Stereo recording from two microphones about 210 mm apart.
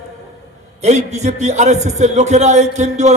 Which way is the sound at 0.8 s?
35° right (ahead or behind).